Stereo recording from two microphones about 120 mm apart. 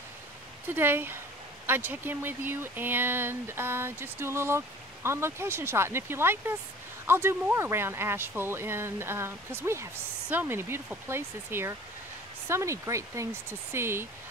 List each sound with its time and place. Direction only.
0.7 s speech: 20° right (ahead or behind)